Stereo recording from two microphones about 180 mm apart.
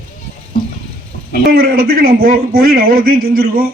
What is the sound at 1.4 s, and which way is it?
A man's voice, 55° right (ahead or behind).